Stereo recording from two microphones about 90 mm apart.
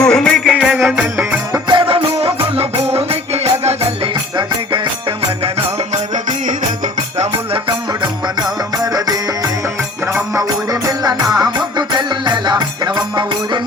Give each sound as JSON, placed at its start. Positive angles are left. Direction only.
{"t": 0.0, "sound": "music", "side_deg": 5}
{"t": 0.5, "sound": "music", "side_deg": -10}
{"t": 1.1, "sound": "music", "side_deg": -20}
{"t": 1.6, "sound": "music", "side_deg": -65}
{"t": 8.8, "sound": "music", "side_deg": -45}